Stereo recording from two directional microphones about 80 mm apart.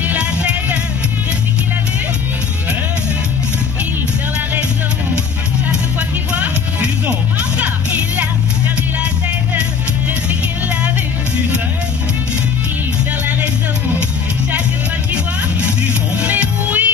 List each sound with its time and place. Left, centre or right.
0.0 s music: centre
5.7 s music: centre
16.2 s music: centre